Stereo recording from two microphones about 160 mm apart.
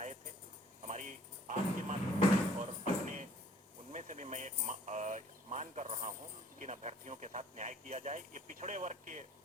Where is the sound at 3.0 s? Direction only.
50° right (ahead or behind).